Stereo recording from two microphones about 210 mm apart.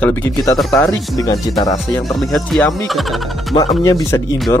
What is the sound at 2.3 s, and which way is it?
Speech, centre (ahead or behind).